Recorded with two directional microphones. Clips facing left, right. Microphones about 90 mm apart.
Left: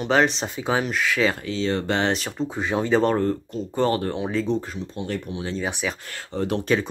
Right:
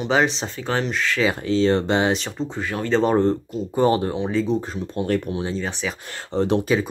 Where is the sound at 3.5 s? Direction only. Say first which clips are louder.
Right 3 dB; 15° right (ahead or behind).